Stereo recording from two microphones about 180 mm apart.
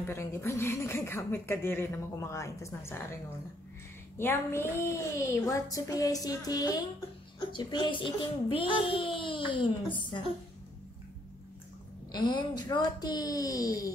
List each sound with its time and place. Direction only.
0.0 s speech: 15° left (ahead or behind)
4.2 s speech: 15° left (ahead or behind)
12.1 s speech: 25° left (ahead or behind)